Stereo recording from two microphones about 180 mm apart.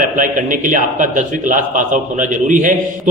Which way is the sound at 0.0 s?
45° right (ahead or behind).